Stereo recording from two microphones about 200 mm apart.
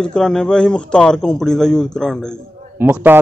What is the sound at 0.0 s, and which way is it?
A man's voice, 5° left (ahead or behind).